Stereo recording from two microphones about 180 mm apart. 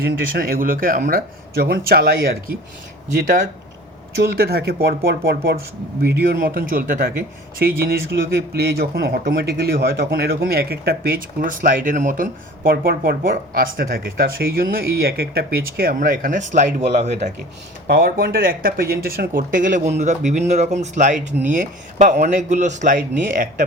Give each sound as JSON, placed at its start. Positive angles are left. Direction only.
{"t": 0.0, "sound": "a man's voice", "side_deg": -55}
{"t": 4.2, "sound": "a man's voice", "side_deg": -60}
{"t": 6.1, "sound": "a man's voice", "side_deg": -55}
{"t": 17.8, "sound": "a man's voice", "side_deg": -55}